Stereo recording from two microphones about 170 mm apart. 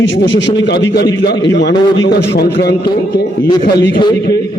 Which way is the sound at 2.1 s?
70° left (ahead or behind).